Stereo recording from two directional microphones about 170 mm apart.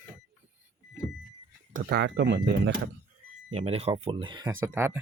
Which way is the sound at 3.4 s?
35° right (ahead or behind).